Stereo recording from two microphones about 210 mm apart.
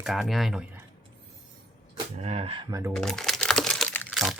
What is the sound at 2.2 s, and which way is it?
Speech, 25° right (ahead or behind).